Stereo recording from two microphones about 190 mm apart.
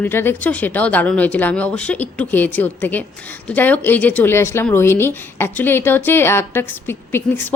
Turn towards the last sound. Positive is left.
turn(degrees=10)  # may be behind; listen again after turning